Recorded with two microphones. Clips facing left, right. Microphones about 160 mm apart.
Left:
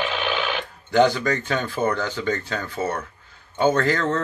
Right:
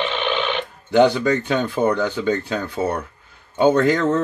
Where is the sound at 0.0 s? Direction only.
5° left (ahead or behind).